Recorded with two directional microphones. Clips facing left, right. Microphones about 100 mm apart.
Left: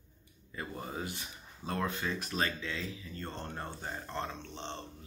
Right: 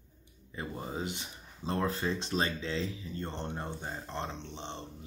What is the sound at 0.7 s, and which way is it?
Speech, 20° right (ahead or behind).